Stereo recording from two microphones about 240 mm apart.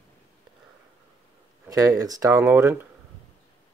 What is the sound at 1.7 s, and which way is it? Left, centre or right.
Speech, centre.